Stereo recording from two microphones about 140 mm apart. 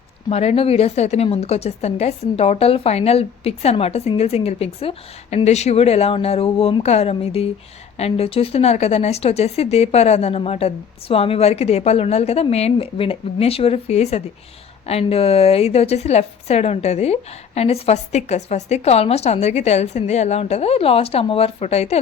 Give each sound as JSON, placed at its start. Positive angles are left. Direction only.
{"t": 0.3, "sound": "a woman's voice", "side_deg": 50}